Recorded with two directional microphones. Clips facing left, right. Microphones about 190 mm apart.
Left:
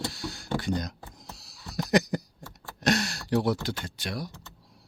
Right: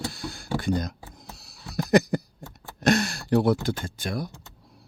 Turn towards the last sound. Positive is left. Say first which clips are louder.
# right 4 dB
turn(degrees=-50)  # may be behind; listen again after turning